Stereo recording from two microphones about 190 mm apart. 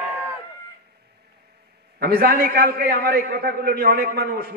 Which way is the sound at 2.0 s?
55° right (ahead or behind).